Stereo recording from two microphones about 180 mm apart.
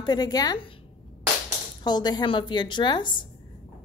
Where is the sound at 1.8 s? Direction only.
25° left (ahead or behind).